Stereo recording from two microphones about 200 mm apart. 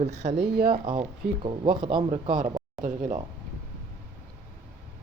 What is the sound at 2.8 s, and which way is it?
Speech, 40° right (ahead or behind).